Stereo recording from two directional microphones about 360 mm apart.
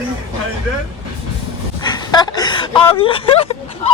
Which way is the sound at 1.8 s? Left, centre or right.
Centre.